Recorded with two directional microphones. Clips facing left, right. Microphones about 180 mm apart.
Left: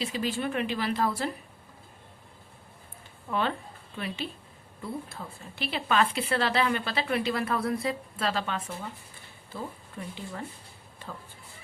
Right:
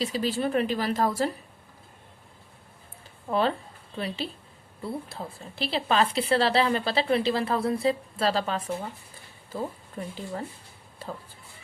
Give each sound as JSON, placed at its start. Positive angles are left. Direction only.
{"t": 0.0, "sound": "a woman's voice", "side_deg": -35}
{"t": 3.2, "sound": "a woman's voice", "side_deg": -35}